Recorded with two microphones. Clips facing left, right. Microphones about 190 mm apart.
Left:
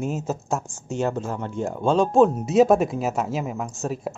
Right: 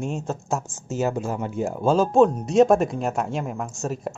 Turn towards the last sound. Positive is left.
turn(degrees=0)  # may be behind; listen again after turning